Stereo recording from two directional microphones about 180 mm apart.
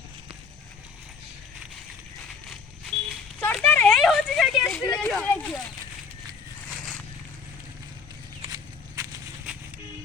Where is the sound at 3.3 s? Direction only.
5° left (ahead or behind).